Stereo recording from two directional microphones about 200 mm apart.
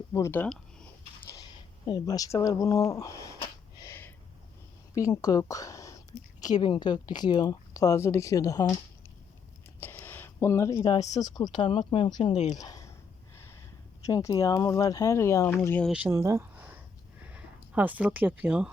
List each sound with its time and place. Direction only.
0.1 s speech: 15° left (ahead or behind)
1.4 s speech: 20° left (ahead or behind)
3.8 s a sound: 15° left (ahead or behind)
4.9 s a woman's voice: 15° left (ahead or behind)
9.8 s speech: 10° left (ahead or behind)
12.3 s speech: 35° left (ahead or behind)
12.5 s a sound: 15° left (ahead or behind)
14.0 s speech: 15° left (ahead or behind)
15.9 s speech: 10° right (ahead or behind)